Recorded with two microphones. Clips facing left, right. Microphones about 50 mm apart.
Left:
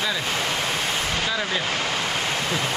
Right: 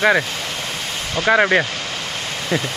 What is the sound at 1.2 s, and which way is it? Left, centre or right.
Speech, right.